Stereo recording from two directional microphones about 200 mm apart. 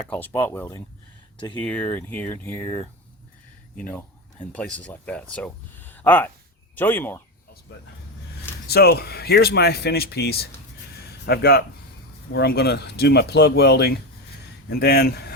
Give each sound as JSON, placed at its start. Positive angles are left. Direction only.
{"t": 0.1, "sound": "speech", "side_deg": 10}
{"t": 8.6, "sound": "speech", "side_deg": 55}